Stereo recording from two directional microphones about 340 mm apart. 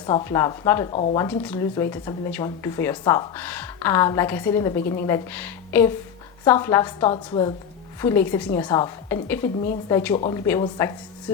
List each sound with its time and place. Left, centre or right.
0.0 s speech: centre
0.9 s speech: left
1.2 s speech: centre
4.8 s speech: left
5.0 s speech: centre
10.2 s speech: centre
10.8 s speech: centre